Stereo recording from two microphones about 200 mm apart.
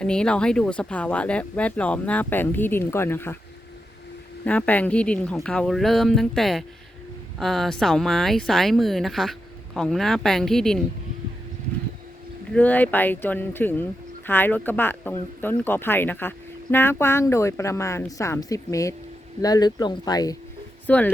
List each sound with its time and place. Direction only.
0.0 s speech: 5° left (ahead or behind)
4.4 s speech: 5° left (ahead or behind)
12.5 s speech: 5° left (ahead or behind)
20.8 s speech: 5° left (ahead or behind)